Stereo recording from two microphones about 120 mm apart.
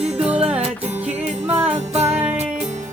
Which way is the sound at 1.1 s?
60° right (ahead or behind).